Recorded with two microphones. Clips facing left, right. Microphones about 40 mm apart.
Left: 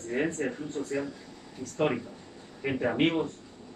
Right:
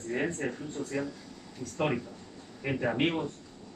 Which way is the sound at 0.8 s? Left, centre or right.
Centre.